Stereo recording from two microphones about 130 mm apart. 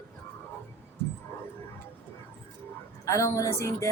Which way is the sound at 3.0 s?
25° left (ahead or behind).